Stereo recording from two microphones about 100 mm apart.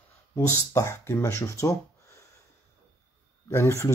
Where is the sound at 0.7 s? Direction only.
30° left (ahead or behind).